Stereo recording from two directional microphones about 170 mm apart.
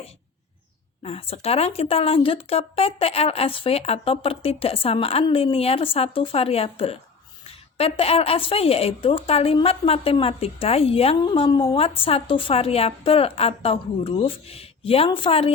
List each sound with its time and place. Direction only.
1.0 s speech: 35° left (ahead or behind)